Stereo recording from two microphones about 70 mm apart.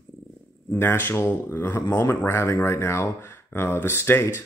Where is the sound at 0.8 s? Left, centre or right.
Left.